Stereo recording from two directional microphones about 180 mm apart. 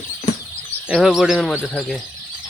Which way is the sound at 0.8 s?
Centre (ahead or behind).